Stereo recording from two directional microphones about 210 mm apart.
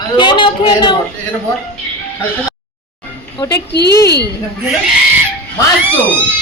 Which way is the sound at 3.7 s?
50° left (ahead or behind).